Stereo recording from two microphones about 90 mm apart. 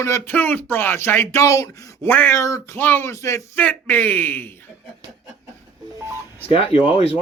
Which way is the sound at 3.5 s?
20° left (ahead or behind).